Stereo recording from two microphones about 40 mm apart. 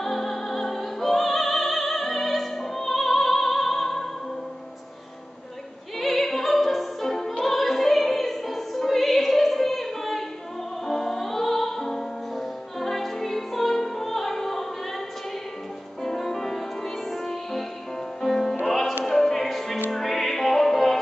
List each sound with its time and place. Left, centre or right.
0.0 s music: centre
5.9 s music: centre
16.0 s music: centre